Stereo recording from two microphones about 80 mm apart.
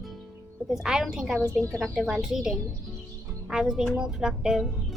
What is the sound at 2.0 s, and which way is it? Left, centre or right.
Speech, centre.